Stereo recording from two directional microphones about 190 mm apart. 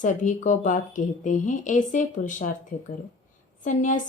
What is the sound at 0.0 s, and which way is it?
Speech, 40° left (ahead or behind).